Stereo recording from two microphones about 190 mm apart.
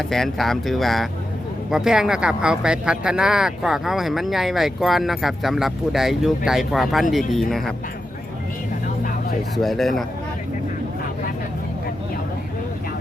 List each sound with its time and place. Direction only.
0.1 s speech: centre (ahead or behind)
9.6 s speech: centre (ahead or behind)